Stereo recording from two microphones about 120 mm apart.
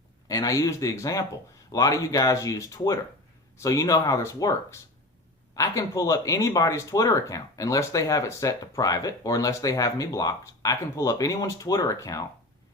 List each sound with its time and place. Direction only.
0.3 s speech: 30° left (ahead or behind)
5.5 s speech: 25° left (ahead or behind)